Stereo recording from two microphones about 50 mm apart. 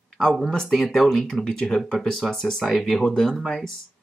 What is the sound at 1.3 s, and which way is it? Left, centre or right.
Speech, centre.